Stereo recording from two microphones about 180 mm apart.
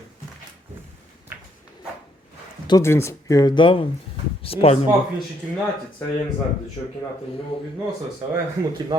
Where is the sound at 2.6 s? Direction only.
15° left (ahead or behind); by 4.9 s 35° left (ahead or behind).